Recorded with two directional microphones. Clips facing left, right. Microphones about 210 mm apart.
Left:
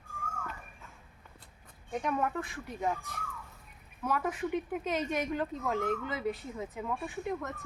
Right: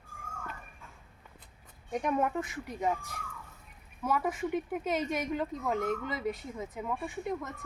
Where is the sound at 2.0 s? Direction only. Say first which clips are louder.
Right 2 dB; 20° right (ahead or behind).